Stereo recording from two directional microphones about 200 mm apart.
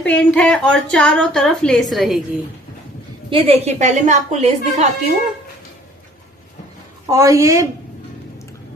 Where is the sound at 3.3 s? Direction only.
30° right (ahead or behind).